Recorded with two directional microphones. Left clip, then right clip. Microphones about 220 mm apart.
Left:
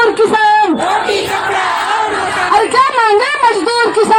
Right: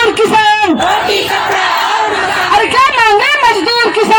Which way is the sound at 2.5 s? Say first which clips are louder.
Right 1 dB; 20° right (ahead or behind).